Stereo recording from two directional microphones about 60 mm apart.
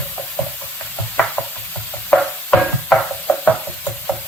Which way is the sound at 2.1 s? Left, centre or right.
Left.